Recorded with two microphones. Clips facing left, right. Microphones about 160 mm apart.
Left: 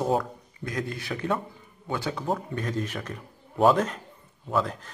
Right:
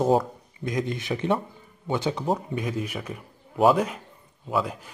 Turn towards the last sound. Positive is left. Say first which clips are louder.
# even
turn(degrees=-10)  # may be behind; listen again after turning